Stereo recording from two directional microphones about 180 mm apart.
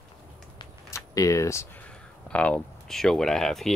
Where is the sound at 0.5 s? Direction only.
20° left (ahead or behind).